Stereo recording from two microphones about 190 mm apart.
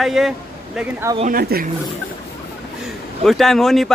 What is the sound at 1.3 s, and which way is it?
Speech, 50° right (ahead or behind).